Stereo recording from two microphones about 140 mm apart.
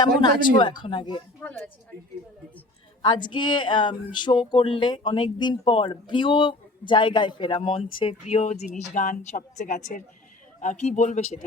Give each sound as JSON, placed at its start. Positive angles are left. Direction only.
{"t": 0.0, "sound": "speech", "side_deg": 30}
{"t": 1.4, "sound": "speech", "side_deg": 15}
{"t": 3.0, "sound": "speech", "side_deg": 35}
{"t": 8.4, "sound": "speech", "side_deg": 60}
{"t": 10.6, "sound": "speech", "side_deg": 55}